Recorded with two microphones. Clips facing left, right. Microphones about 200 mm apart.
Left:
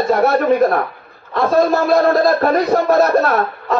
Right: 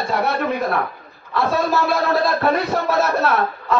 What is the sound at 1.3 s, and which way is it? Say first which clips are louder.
A man's voice: left 5 dB; 45° left (ahead or behind).